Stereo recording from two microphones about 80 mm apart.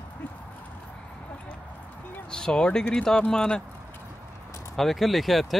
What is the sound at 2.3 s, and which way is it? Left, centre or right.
Speech, centre.